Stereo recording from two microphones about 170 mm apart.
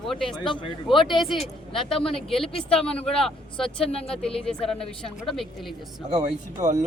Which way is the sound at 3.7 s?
35° left (ahead or behind).